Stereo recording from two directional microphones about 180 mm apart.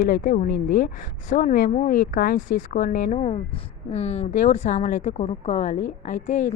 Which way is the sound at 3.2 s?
35° left (ahead or behind).